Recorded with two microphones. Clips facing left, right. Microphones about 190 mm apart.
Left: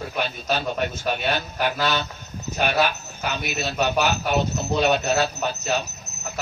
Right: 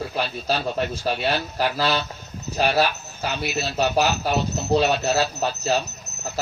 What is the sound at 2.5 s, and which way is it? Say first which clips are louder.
A man's voice: right 1 dB; 35° right (ahead or behind).